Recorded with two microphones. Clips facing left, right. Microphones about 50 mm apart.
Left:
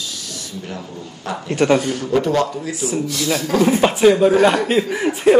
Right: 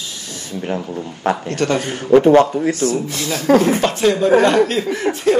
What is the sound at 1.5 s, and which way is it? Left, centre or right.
Speech, centre.